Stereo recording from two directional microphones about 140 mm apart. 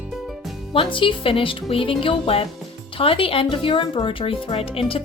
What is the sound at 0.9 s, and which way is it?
Speech, 40° left (ahead or behind).